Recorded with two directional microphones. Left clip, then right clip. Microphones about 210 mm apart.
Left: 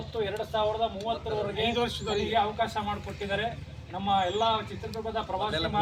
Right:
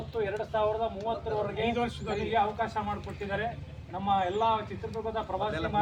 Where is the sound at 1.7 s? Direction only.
20° right (ahead or behind).